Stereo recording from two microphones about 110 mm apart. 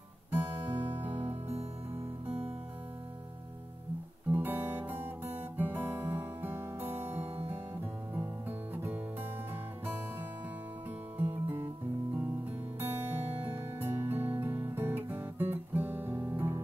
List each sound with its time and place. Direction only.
0.3 s music: 20° right (ahead or behind)
1.1 s music: 55° right (ahead or behind)
4.3 s guitar: 15° right (ahead or behind)
8.1 s music: 20° right (ahead or behind)
11.1 s music: 20° right (ahead or behind)
13.7 s music: 20° right (ahead or behind)